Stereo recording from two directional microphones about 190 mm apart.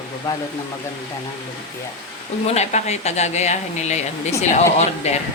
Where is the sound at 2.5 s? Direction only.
35° left (ahead or behind).